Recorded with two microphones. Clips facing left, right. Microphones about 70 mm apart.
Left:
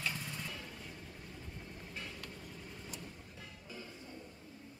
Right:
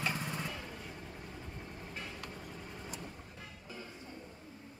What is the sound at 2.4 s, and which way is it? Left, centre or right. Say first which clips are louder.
Vehicle: right 3 dB; right.